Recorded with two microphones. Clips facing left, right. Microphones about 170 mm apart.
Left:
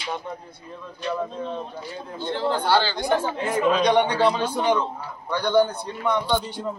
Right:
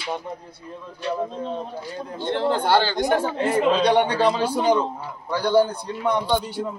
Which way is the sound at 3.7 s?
30° right (ahead or behind).